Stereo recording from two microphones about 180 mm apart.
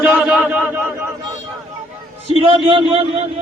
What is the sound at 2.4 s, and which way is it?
Speech, 30° right (ahead or behind).